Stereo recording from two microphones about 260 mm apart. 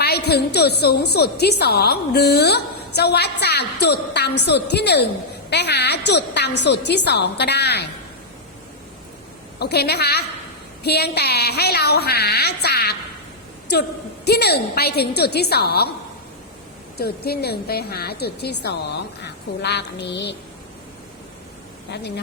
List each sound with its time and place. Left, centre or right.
0.0 s a woman's voice: left
9.6 s a woman's voice: left
14.3 s a woman's voice: left
17.0 s a woman's voice: left
21.8 s speech: left